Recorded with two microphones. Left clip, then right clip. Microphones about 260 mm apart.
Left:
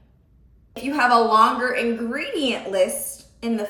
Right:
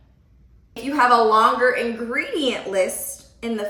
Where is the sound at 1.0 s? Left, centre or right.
Centre.